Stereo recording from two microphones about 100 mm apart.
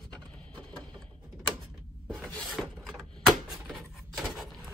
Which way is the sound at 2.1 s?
10° left (ahead or behind).